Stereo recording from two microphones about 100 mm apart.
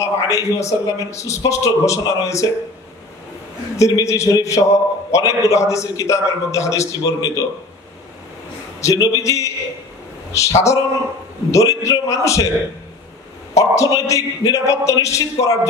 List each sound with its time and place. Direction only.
0.0 s a man's voice: 30° left (ahead or behind)
3.7 s a man's voice: 30° left (ahead or behind)
8.8 s a man's voice: 35° left (ahead or behind)
13.6 s a man's voice: 35° left (ahead or behind)